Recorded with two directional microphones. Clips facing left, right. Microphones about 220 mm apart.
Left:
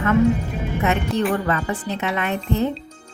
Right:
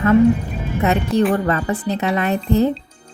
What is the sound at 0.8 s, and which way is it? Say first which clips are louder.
A woman's voice: right 5 dB; 35° right (ahead or behind).